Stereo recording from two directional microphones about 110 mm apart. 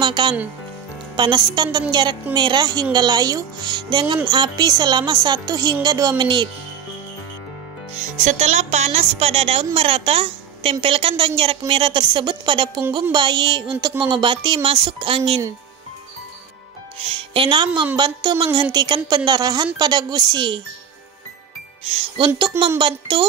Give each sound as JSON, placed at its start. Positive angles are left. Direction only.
{"t": 0.0, "sound": "a woman's voice", "side_deg": -45}
{"t": 8.2, "sound": "a woman's voice", "side_deg": -90}
{"t": 17.1, "sound": "a woman's voice", "side_deg": -55}
{"t": 21.8, "sound": "a woman's voice", "side_deg": -60}
{"t": 22.8, "sound": "a woman's voice", "side_deg": -50}